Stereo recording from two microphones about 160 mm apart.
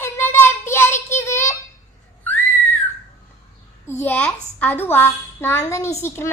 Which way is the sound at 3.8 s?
15° left (ahead or behind).